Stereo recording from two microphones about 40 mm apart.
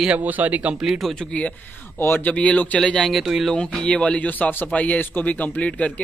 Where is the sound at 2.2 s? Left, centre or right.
Left.